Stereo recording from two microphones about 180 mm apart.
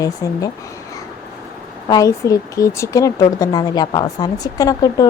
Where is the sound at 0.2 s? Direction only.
20° left (ahead or behind).